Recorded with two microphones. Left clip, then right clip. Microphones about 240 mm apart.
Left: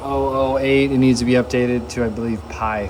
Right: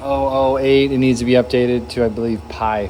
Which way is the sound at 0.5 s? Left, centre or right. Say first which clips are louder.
Right 3 dB; centre.